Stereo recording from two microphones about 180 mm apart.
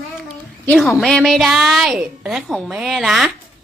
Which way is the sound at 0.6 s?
Centre (ahead or behind).